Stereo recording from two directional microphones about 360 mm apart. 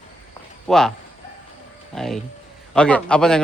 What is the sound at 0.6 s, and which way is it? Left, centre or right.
Speech, centre.